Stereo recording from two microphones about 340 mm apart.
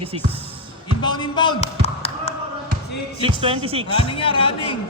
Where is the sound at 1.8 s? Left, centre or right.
Centre.